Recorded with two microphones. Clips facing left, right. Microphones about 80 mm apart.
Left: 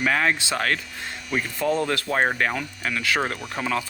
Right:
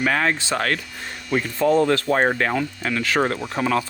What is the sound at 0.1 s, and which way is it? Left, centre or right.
Speech, right.